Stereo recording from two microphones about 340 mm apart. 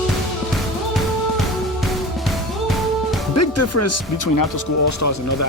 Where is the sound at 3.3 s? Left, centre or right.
Left.